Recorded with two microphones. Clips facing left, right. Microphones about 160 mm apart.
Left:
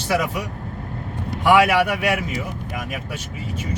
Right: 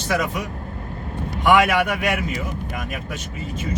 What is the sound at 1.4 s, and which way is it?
Speech, 5° left (ahead or behind).